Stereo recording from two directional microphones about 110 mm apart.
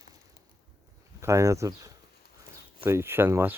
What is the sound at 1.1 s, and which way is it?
Speech, 25° right (ahead or behind).